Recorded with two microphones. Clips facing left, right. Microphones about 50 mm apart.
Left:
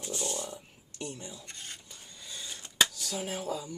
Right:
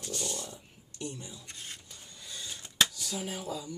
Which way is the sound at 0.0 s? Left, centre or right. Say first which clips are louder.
Left 2 dB; centre.